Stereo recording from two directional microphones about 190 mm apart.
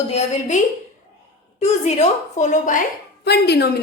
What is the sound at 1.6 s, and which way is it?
A woman's voice, 35° left (ahead or behind).